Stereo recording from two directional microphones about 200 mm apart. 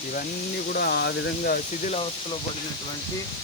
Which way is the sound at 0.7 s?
50° left (ahead or behind).